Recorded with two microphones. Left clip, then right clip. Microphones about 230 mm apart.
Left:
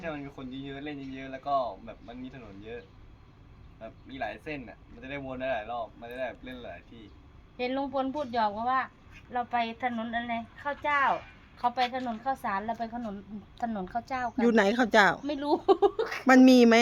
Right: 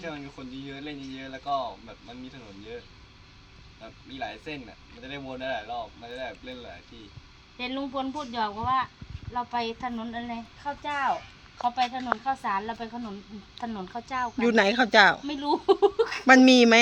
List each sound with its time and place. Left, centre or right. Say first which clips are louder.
0.0 s speech: even; centre
4.1 s speech: even; centre
7.6 s a woman's voice: left 1 dB; left
12.2 s a woman's voice: right 3 dB; left
14.0 s speech: right 6 dB; left
14.3 s speech: right 2 dB; centre
15.3 s speech: right 1 dB; left
16.2 s speech: right 2 dB; centre